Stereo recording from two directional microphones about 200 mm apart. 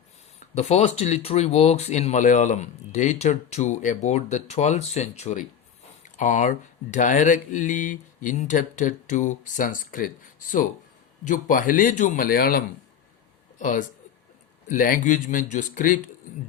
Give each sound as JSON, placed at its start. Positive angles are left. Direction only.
{"t": 0.5, "sound": "speech", "side_deg": 35}
{"t": 11.3, "sound": "speech", "side_deg": 40}